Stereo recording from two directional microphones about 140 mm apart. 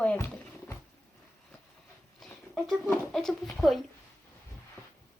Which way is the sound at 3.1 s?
Centre (ahead or behind).